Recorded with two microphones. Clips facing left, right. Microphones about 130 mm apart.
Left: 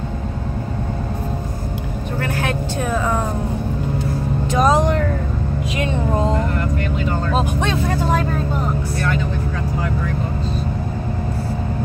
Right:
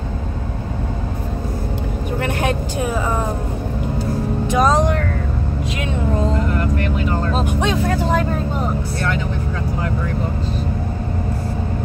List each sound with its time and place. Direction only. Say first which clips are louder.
2.1 s vehicle: right 2 dB; 20° right (ahead or behind)
4.6 s speech: even; 5° left (ahead or behind)